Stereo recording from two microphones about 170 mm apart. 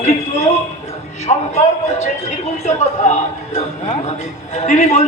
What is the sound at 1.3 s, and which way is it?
Speech, 40° left (ahead or behind).